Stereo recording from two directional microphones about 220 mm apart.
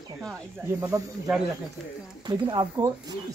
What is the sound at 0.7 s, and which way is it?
Speech, 10° right (ahead or behind).